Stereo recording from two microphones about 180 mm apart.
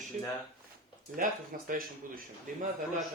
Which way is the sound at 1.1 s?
50° right (ahead or behind).